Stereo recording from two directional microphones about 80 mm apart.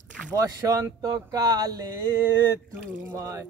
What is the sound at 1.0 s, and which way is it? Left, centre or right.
Speech, right.